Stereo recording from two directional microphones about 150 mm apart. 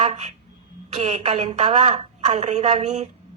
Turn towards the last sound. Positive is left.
turn(degrees=-45)  # may be behind; listen again after turning